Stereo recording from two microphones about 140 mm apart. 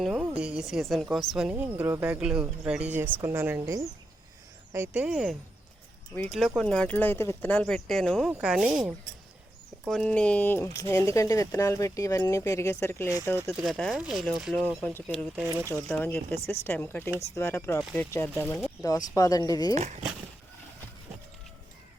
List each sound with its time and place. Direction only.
0.0 s a sound: centre (ahead or behind)
0.3 s a woman's voice: 5° right (ahead or behind); by 13.1 s 20° left (ahead or behind)
13.5 s a woman's voice: centre (ahead or behind); by 17.7 s 20° left (ahead or behind)
17.7 s speech: 5° left (ahead or behind)
18.8 s speech: 25° left (ahead or behind)
19.7 s speech: 55° right (ahead or behind)